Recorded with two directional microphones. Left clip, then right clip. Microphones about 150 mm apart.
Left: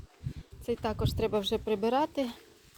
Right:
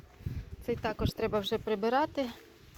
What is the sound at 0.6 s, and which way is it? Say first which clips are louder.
Speech: left 1 dB; 35° left (ahead or behind).